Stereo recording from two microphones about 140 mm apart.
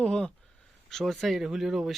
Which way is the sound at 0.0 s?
5° left (ahead or behind).